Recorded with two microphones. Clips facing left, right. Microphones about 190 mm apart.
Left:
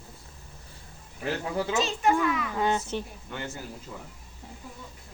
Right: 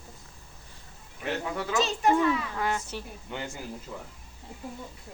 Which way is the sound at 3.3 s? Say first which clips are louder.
Right 1 dB; 15° right (ahead or behind).